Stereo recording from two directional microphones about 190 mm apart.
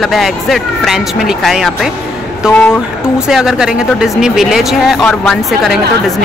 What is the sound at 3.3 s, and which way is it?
Speech, centre (ahead or behind).